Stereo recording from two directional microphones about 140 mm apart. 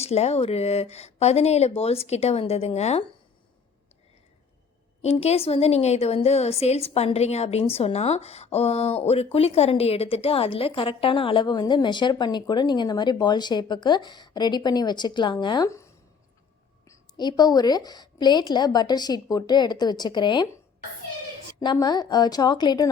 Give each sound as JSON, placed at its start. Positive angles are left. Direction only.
{"t": 0.0, "sound": "speech", "side_deg": 50}
{"t": 5.0, "sound": "a woman's voice", "side_deg": 50}
{"t": 21.6, "sound": "a woman's voice", "side_deg": 30}